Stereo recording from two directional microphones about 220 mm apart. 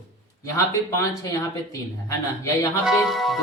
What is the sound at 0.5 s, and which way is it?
Speech, 15° left (ahead or behind).